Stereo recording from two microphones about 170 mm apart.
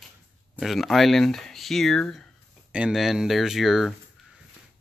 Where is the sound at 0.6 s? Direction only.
Centre (ahead or behind).